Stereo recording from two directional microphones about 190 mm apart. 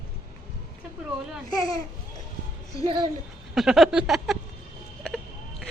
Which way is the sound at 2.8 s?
30° right (ahead or behind).